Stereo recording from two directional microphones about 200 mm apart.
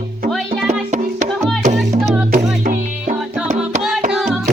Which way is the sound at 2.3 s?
40° right (ahead or behind).